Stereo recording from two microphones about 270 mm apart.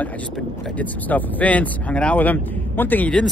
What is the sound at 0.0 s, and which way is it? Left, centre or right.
Speech, centre.